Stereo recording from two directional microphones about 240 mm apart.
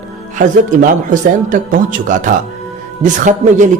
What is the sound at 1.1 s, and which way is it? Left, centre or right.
Speech, right.